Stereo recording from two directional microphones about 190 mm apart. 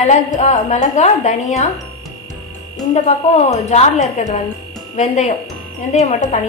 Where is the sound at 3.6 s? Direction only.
35° left (ahead or behind).